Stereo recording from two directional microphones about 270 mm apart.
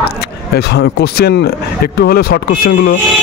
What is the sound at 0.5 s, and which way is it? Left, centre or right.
Speech, left.